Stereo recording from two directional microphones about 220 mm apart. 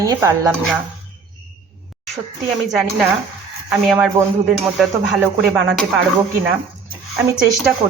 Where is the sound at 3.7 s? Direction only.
Centre (ahead or behind).